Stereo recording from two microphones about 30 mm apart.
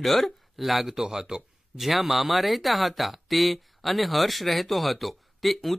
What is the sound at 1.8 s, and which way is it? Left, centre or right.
Speech, centre.